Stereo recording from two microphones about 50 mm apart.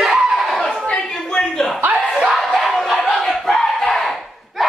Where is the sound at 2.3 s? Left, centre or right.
Centre.